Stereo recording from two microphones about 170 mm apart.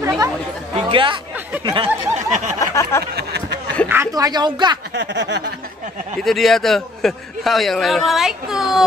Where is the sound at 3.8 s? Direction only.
15° right (ahead or behind).